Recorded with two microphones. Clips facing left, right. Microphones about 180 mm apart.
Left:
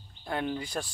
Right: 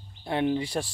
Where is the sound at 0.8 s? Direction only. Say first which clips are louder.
Right 4 dB; 15° right (ahead or behind).